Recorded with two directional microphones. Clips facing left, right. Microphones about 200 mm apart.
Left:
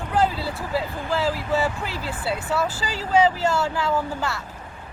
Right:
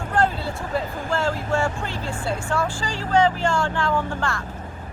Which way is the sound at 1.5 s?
5° left (ahead or behind).